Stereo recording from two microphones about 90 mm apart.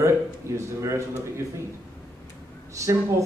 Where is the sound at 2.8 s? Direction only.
35° right (ahead or behind).